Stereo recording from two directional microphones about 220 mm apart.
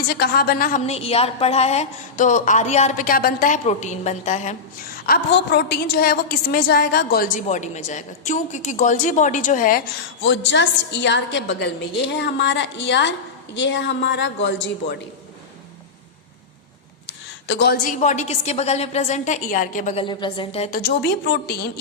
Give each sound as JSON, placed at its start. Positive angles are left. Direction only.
{"t": 0.1, "sound": "a woman's voice", "side_deg": 45}
{"t": 5.0, "sound": "a woman's voice", "side_deg": 45}
{"t": 10.2, "sound": "a woman's voice", "side_deg": 55}
{"t": 17.1, "sound": "a sound", "side_deg": 55}
{"t": 18.0, "sound": "a woman's voice", "side_deg": 30}
{"t": 20.1, "sound": "a woman's voice", "side_deg": 20}
{"t": 20.7, "sound": "a woman's voice", "side_deg": 50}